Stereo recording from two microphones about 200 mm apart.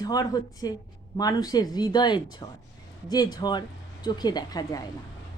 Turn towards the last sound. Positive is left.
turn(degrees=20)  # may be behind; listen again after turning